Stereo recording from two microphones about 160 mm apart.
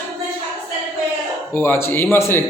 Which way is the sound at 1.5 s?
10° left (ahead or behind).